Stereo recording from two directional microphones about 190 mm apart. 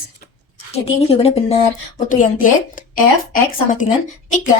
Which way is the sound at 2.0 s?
45° left (ahead or behind).